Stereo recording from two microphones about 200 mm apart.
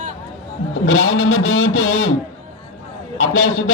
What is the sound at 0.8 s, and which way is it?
Speech, 85° left.